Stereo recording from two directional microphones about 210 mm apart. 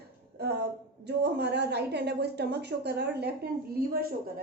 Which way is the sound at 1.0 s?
55° right (ahead or behind).